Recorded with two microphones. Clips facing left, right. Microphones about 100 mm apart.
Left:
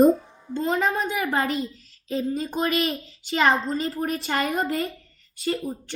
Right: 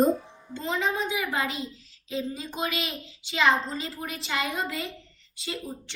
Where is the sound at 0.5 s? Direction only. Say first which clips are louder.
Left 5 dB; 45° left (ahead or behind).